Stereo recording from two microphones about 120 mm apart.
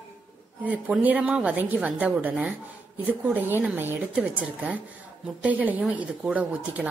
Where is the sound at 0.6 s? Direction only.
15° right (ahead or behind).